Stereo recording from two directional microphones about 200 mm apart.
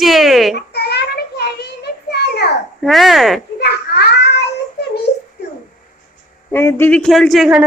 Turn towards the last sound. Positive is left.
turn(degrees=-5)  # may be behind; listen again after turning